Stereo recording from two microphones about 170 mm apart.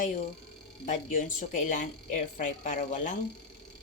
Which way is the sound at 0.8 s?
45° left (ahead or behind).